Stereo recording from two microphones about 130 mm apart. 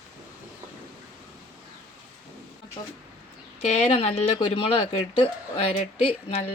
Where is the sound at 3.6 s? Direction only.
55° left (ahead or behind).